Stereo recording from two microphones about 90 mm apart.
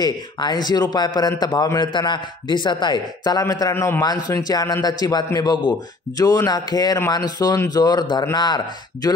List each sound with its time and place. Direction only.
0.0 s a man's voice: 55° left (ahead or behind)
3.7 s a man's voice: 25° left (ahead or behind)
4.0 s a man's voice: 50° left (ahead or behind)
6.1 s a man's voice: 40° left (ahead or behind)